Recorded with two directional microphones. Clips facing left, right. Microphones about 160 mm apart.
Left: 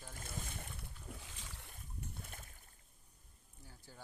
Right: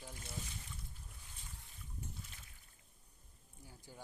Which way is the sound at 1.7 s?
55° left (ahead or behind).